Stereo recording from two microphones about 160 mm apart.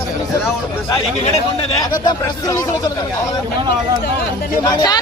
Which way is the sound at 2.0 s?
20° left (ahead or behind).